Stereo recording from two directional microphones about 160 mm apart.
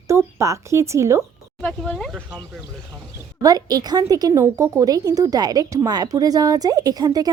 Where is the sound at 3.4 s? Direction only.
25° right (ahead or behind).